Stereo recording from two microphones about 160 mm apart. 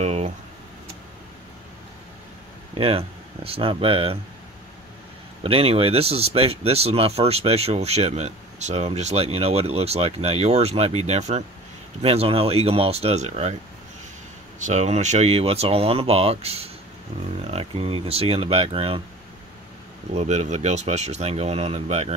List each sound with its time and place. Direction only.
0.0 s a sound: 40° right (ahead or behind)
2.7 s speech: 35° right (ahead or behind)
5.4 s speech: 35° right (ahead or behind)
14.6 s speech: 45° right (ahead or behind)
20.2 s speech: 45° right (ahead or behind)